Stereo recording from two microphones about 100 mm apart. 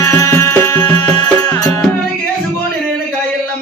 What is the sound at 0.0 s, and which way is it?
Music, 30° left (ahead or behind).